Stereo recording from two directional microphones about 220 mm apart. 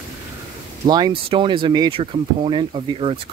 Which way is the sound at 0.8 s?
20° right (ahead or behind).